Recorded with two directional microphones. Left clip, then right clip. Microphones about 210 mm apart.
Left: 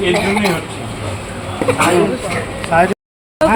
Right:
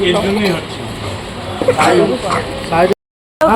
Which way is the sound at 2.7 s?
40° left (ahead or behind).